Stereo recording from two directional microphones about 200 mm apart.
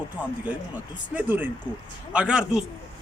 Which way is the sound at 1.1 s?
10° right (ahead or behind).